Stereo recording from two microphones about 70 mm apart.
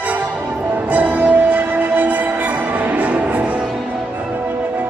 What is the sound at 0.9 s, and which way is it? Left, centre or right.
Music, right.